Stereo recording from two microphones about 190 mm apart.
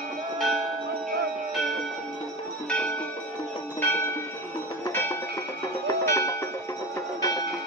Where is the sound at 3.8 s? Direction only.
10° left (ahead or behind).